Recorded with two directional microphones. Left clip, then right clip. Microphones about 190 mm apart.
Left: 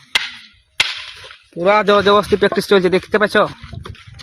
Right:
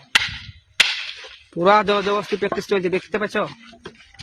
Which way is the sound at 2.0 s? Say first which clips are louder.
Left 9 dB; 45° left (ahead or behind).